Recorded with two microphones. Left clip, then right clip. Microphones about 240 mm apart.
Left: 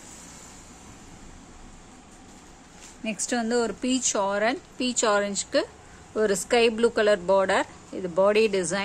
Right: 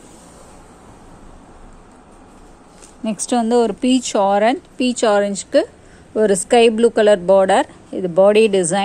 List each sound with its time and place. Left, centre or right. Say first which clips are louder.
3.0 s speech: right 9 dB; centre